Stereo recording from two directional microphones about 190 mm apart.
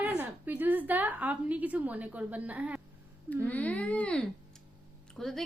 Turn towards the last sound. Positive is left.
turn(degrees=0)  # may be behind; listen again after turning